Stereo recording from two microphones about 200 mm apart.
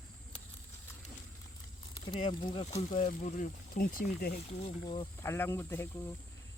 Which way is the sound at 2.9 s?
40° left (ahead or behind).